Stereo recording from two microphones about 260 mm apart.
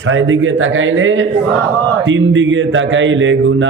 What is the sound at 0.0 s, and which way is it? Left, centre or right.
A man's voice, right.